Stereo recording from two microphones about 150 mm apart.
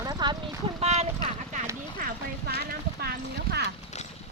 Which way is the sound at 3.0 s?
90° right.